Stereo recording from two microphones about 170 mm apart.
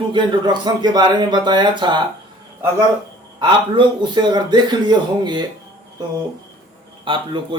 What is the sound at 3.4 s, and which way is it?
A man's voice, 30° right (ahead or behind).